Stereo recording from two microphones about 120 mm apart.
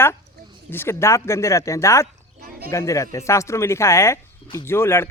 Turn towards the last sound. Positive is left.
turn(degrees=20)  # may be behind; listen again after turning